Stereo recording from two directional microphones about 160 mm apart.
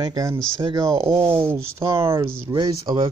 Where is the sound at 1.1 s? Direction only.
10° right (ahead or behind).